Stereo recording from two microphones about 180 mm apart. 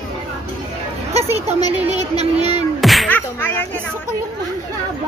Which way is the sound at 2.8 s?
Centre (ahead or behind).